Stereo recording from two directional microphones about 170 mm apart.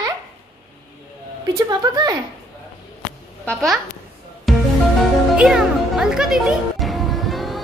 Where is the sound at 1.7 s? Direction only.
20° right (ahead or behind).